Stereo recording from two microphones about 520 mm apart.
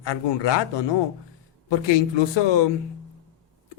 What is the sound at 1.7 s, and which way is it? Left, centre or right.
Speech, left.